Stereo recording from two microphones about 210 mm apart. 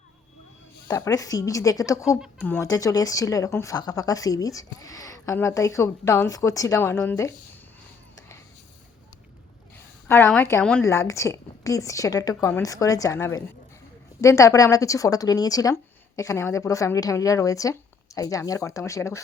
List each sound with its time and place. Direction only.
0.9 s speech: 15° left (ahead or behind)
10.1 s speech: 10° left (ahead or behind)